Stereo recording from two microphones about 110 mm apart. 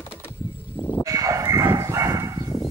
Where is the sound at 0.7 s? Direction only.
15° left (ahead or behind).